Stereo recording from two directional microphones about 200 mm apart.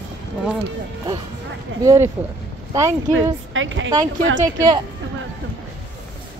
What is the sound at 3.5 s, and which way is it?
Speech, 70° right (ahead or behind).